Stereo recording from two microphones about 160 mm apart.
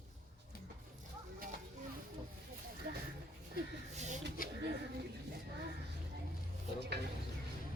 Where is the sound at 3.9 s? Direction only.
45° right (ahead or behind).